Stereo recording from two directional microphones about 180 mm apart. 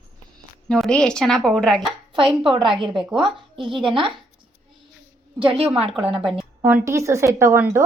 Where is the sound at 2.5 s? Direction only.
30° right (ahead or behind).